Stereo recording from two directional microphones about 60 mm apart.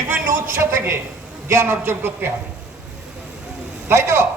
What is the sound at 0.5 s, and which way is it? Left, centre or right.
A woman's voice, right.